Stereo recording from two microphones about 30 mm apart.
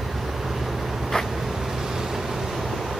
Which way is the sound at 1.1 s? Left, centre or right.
Left.